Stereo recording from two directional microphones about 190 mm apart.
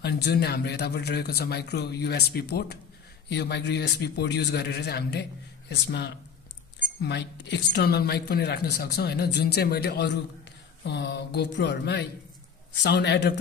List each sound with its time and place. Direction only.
0.0 s a woman's voice: 60° left (ahead or behind)